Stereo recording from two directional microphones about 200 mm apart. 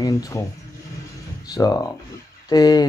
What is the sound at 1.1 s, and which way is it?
Music, 20° left (ahead or behind).